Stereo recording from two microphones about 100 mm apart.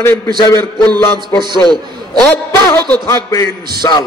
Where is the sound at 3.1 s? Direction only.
30° left (ahead or behind).